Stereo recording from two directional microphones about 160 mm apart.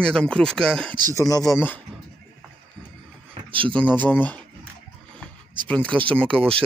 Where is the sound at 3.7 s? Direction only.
10° left (ahead or behind).